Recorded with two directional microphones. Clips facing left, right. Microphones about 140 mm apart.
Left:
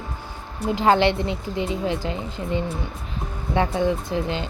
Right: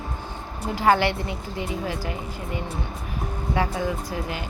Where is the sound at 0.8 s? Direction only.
20° left (ahead or behind).